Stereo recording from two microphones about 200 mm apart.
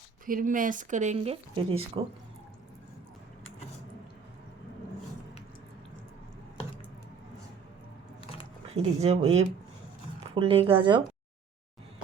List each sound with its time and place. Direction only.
0.3 s speech: 40° right (ahead or behind)
8.7 s speech: 30° right (ahead or behind)